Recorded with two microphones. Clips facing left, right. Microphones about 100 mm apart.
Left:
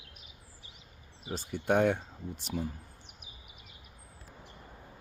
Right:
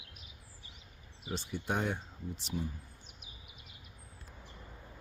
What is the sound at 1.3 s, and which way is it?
Speech, 45° left (ahead or behind).